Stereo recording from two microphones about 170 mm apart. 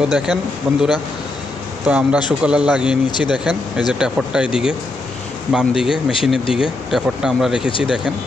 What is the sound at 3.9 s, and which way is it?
Speech, 5° right (ahead or behind).